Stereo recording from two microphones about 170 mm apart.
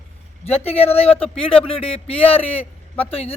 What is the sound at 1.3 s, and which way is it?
Speech, 5° left (ahead or behind).